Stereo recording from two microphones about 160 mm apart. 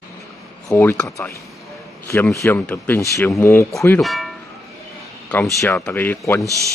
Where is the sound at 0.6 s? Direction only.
15° left (ahead or behind).